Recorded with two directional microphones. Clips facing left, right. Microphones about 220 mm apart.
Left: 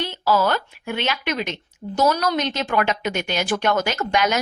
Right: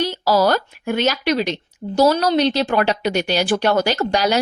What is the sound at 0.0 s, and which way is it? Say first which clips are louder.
A woman's voice: right 4 dB; 40° right (ahead or behind).